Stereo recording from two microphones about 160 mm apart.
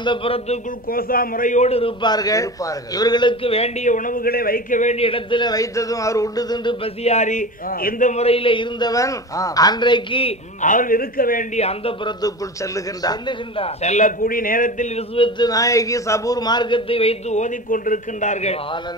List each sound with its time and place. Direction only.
0.0 s a man's voice: 35° left (ahead or behind)
0.8 s a man's voice: 65° left (ahead or behind); by 10.3 s 30° left (ahead or behind)
10.6 s a man's voice: 55° left (ahead or behind)
11.5 s a man's voice: 40° left (ahead or behind)
12.2 s a man's voice: 25° left (ahead or behind)
13.8 s a man's voice: 50° left (ahead or behind)
15.0 s a man's voice: 30° left (ahead or behind)